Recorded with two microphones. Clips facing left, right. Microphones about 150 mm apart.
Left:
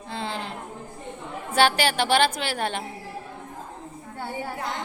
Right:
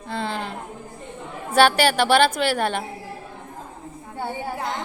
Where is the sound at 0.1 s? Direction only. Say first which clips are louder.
Right 4 dB; 55° right (ahead or behind).